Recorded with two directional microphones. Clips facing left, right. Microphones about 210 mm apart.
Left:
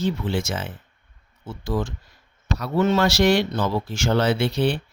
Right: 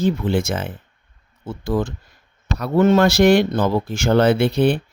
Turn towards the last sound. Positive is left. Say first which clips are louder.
# right 5 dB
turn(degrees=-55)  # may be behind; listen again after turning